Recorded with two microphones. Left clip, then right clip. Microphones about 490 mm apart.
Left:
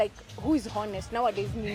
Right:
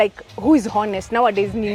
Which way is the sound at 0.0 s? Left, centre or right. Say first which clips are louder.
Right 11 dB; right.